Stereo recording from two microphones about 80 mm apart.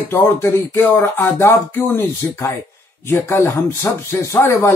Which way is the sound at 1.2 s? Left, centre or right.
Left.